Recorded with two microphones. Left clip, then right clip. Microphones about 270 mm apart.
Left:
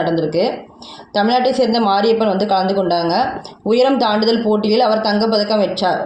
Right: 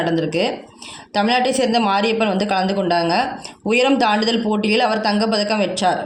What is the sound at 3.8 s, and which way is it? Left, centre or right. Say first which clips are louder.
A woman's voice: left 1 dB; right.